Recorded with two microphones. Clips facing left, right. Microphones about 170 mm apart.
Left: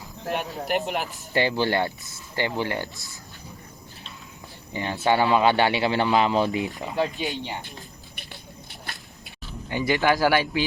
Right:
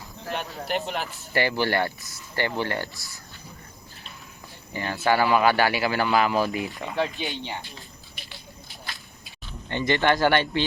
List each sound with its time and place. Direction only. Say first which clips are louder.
0.3 s speech: left 3 dB; 20° left (ahead or behind)
4.7 s speech: left 1 dB; 20° left (ahead or behind)
6.9 s speech: left 1 dB; 5° left (ahead or behind)
7.6 s a sound: left 2 dB; 55° left (ahead or behind)
8.7 s squish: even; 65° left (ahead or behind)
9.5 s speech: even; 10° left (ahead or behind)